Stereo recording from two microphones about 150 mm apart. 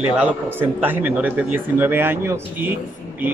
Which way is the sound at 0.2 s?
15° right (ahead or behind).